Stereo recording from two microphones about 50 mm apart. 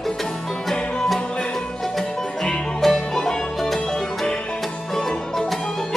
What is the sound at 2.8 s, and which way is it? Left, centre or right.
Music, centre.